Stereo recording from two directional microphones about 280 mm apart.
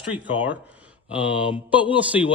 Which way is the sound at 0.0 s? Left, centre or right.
Centre.